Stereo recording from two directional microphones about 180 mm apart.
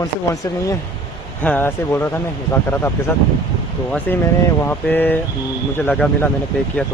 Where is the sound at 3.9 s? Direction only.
10° left (ahead or behind).